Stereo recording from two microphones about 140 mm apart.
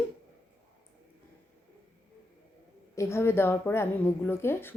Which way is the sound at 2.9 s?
20° left (ahead or behind).